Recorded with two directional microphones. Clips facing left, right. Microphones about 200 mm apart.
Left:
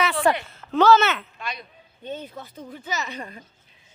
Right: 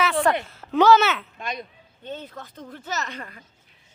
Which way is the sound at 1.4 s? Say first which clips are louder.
Right 3 dB; 45° right (ahead or behind).